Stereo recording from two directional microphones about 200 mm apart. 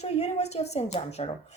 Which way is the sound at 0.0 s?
35° left (ahead or behind).